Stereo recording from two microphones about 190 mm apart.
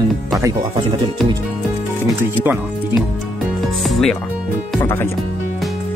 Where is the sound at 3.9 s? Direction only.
Centre (ahead or behind).